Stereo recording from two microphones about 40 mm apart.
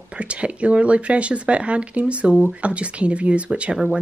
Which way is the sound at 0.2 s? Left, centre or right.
Right.